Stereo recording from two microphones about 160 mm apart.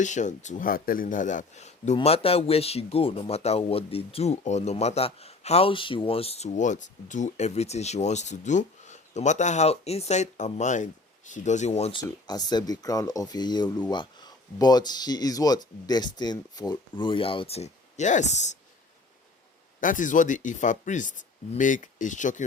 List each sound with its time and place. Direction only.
0.0 s speech: 50° left (ahead or behind)
19.8 s speech: 55° left (ahead or behind)